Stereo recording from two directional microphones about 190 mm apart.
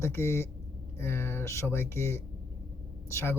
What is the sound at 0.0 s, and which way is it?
Speech, 15° left (ahead or behind).